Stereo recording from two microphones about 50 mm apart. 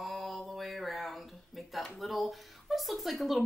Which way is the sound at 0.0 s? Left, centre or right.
Centre.